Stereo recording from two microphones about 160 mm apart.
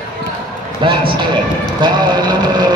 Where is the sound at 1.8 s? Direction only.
25° right (ahead or behind).